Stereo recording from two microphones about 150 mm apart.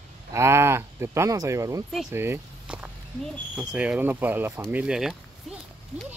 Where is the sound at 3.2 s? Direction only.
Centre (ahead or behind).